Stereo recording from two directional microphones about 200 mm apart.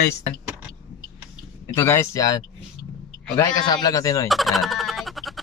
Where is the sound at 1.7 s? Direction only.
10° left (ahead or behind).